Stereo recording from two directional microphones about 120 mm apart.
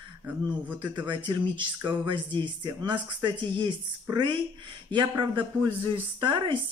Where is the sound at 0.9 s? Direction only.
40° right (ahead or behind).